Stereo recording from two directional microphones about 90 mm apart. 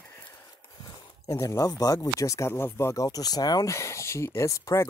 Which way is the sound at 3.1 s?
45° left (ahead or behind).